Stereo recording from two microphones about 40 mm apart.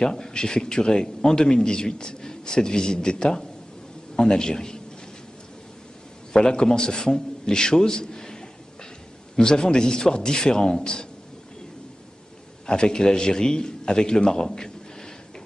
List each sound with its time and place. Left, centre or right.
0.0 s a man's voice: centre
6.3 s a man's voice: centre
12.6 s a man's voice: left